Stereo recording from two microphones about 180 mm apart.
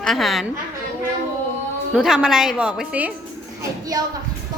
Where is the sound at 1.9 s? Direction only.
5° right (ahead or behind).